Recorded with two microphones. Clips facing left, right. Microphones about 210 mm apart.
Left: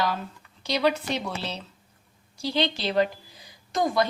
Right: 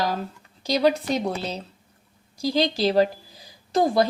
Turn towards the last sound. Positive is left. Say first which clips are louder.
# right 4 dB
turn(degrees=-35)  # may be behind; listen again after turning